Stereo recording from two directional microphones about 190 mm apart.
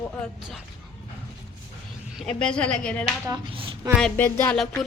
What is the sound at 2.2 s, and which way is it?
Child singing, 5° left (ahead or behind).